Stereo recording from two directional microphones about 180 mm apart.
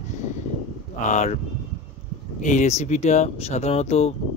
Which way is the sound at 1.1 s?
40° left (ahead or behind).